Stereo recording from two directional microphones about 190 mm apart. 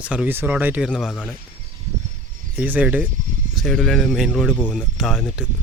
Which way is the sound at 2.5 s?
10° right (ahead or behind).